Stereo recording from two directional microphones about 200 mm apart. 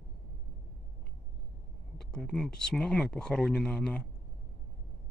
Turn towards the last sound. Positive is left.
turn(degrees=5)  # may be behind; listen again after turning